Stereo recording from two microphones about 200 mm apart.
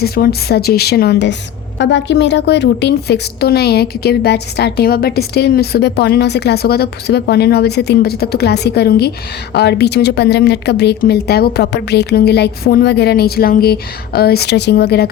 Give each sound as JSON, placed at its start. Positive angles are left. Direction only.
{"t": 0.0, "sound": "a woman's voice", "side_deg": 50}